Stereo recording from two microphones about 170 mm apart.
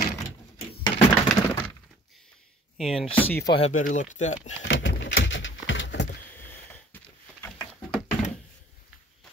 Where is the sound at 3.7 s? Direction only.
50° left (ahead or behind).